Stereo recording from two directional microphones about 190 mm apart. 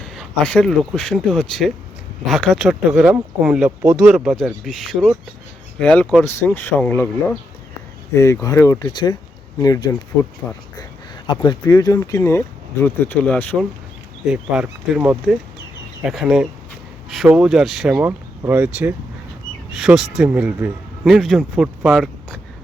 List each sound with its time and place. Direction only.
0.0 s speech: 5° left (ahead or behind)
6.2 s speech: 15° left (ahead or behind)
10.4 s speech: 10° left (ahead or behind)
11.4 s speech: 20° left (ahead or behind)
14.3 s speech: 5° right (ahead or behind)